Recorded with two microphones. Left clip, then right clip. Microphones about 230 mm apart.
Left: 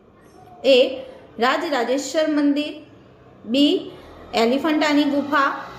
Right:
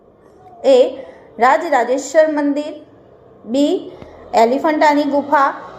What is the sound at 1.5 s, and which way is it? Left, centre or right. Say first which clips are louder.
Speech: right 7 dB; centre.